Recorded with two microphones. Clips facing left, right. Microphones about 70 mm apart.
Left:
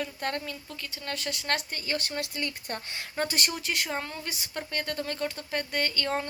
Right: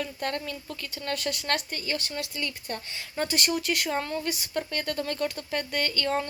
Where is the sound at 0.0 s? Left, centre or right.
Left.